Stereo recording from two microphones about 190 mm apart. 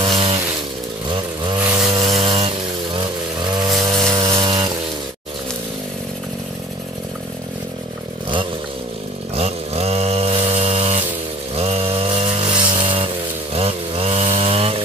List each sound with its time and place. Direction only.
0.0 s a sound: 30° right (ahead or behind)
1.0 s chainsaw: 25° right (ahead or behind)
9.3 s chainsaw: 35° right (ahead or behind)